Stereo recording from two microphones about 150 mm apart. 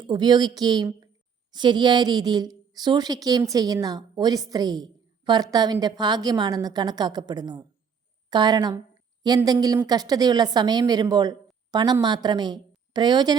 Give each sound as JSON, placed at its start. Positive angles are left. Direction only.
{"t": 0.0, "sound": "a woman's voice", "side_deg": -30}